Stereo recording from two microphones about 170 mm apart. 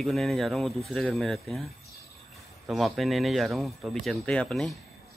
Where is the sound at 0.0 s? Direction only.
Centre (ahead or behind).